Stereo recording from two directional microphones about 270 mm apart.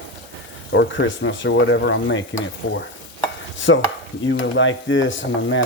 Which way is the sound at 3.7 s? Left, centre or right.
Left.